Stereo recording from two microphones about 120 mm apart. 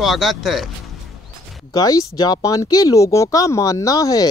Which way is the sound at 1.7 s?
30° left (ahead or behind).